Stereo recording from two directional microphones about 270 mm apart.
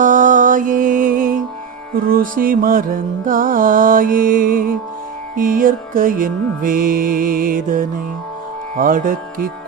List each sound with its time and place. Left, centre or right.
0.0 s music: right
8.7 s speech: right